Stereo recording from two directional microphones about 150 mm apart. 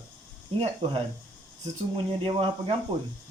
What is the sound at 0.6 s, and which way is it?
Speech, 40° right (ahead or behind).